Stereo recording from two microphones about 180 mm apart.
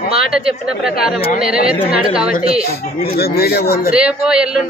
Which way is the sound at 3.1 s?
60° left (ahead or behind).